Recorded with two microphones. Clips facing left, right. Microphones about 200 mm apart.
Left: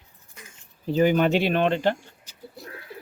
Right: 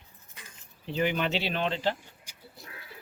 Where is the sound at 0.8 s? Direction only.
40° left (ahead or behind).